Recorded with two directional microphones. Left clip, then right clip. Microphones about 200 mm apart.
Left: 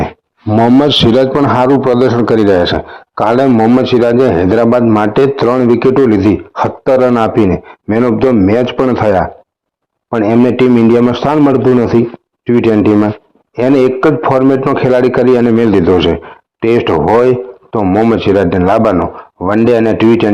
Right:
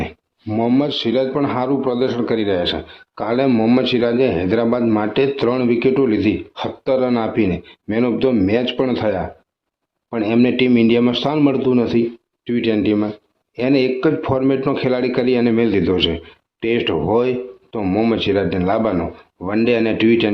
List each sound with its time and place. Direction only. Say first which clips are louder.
0.0 s a sound: left 10 dB; 25° left (ahead or behind)
0.6 s a man's voice: left 10 dB; 40° left (ahead or behind); by 3.5 s 20° left (ahead or behind)
3.5 s a man's voice: left 7 dB; 5° left (ahead or behind)
10.2 s a man's voice: left 7 dB; 10° left (ahead or behind)
17.7 s a man's voice: left 8 dB; 5° left (ahead or behind)